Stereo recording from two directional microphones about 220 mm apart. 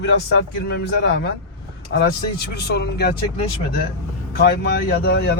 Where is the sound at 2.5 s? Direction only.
50° left (ahead or behind).